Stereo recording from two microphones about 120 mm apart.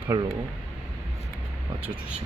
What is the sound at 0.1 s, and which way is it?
Speech, 35° right (ahead or behind).